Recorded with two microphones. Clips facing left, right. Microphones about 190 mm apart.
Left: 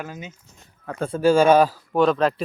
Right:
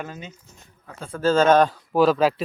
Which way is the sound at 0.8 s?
60° left (ahead or behind).